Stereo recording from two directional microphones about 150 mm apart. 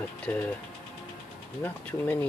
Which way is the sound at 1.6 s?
10° left (ahead or behind).